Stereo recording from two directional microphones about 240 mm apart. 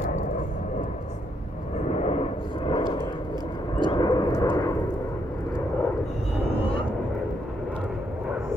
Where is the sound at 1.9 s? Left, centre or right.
Left.